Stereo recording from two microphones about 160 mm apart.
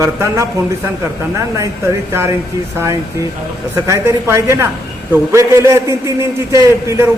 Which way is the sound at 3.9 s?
15° right (ahead or behind).